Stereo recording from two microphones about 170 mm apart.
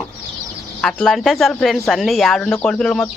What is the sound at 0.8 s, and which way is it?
Speech, centre (ahead or behind).